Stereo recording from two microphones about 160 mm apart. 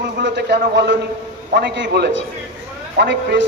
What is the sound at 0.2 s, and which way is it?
A man's voice, 90° right.